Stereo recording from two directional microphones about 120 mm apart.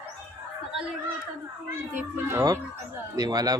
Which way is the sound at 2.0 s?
20° right (ahead or behind).